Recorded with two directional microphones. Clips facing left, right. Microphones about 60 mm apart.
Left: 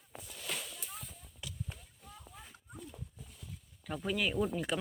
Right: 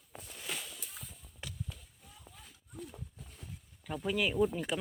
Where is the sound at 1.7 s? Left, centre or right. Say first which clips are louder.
Left 2 dB; left.